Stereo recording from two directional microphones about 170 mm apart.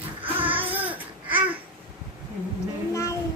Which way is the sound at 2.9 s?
15° left (ahead or behind).